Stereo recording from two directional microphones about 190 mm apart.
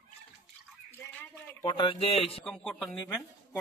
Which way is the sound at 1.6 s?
25° left (ahead or behind).